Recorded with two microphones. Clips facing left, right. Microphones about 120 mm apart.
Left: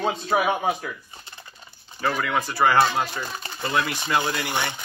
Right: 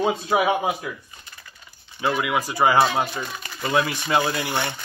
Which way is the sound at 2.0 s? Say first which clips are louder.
Right 2 dB; 10° right (ahead or behind).